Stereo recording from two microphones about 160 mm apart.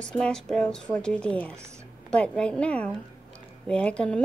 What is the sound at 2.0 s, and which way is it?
A child's voice, 5° left (ahead or behind).